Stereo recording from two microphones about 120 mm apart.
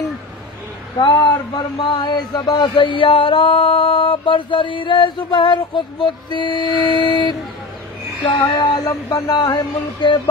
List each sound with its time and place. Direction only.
0.9 s speech: 40° left (ahead or behind)